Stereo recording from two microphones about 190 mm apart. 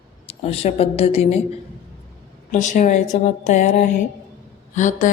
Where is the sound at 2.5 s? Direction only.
40° left (ahead or behind).